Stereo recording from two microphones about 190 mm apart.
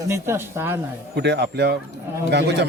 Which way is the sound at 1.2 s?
60° right (ahead or behind).